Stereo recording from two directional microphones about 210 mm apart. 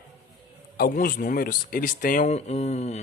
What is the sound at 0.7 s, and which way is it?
Speech, 45° left (ahead or behind).